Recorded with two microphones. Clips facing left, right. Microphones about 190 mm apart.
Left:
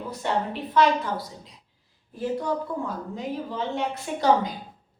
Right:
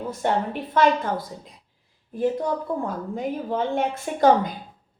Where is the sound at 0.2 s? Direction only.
50° right (ahead or behind).